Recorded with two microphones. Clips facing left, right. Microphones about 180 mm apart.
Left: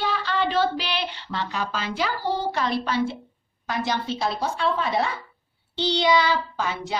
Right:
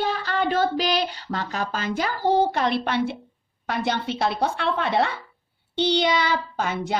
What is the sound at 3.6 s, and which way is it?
A child's voice, 60° right (ahead or behind).